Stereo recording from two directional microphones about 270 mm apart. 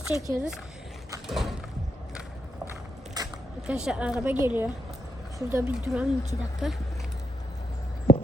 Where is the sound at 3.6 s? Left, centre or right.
Centre.